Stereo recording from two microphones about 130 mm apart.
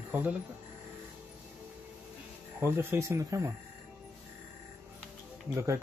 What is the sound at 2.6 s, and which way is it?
Speech, 20° right (ahead or behind).